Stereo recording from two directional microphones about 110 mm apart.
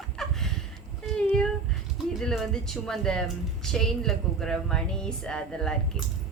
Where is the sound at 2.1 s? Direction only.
Centre (ahead or behind).